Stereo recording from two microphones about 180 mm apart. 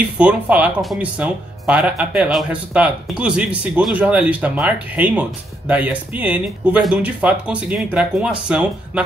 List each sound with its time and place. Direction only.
0.2 s speech: 5° right (ahead or behind)